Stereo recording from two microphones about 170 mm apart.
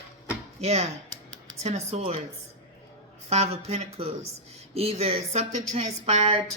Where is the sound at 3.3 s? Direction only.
40° right (ahead or behind).